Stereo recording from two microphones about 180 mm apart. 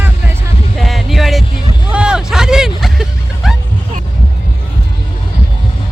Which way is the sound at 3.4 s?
Centre (ahead or behind).